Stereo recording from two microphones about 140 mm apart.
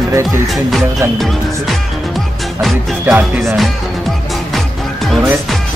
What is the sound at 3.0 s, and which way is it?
Music, 15° right (ahead or behind).